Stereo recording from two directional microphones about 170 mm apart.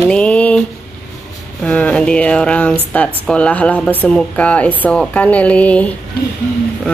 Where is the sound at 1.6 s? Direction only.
5° left (ahead or behind).